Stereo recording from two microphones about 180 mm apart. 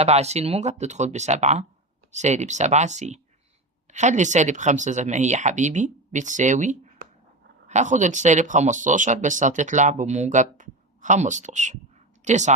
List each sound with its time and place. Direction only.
0.0 s speech: 35° right (ahead or behind)